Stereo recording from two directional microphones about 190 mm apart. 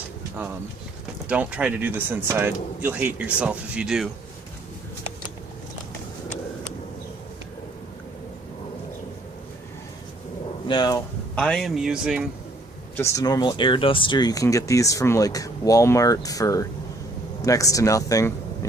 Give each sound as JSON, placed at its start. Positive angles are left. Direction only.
{"t": 1.3, "sound": "speech", "side_deg": -5}
{"t": 10.7, "sound": "speech", "side_deg": 20}
{"t": 11.3, "sound": "speech", "side_deg": 5}
{"t": 13.0, "sound": "speech", "side_deg": 15}